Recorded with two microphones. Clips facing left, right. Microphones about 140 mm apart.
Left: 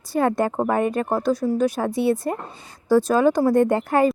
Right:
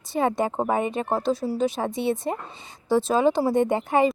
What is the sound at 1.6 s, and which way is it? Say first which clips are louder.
Speech: left 3 dB; centre (ahead or behind).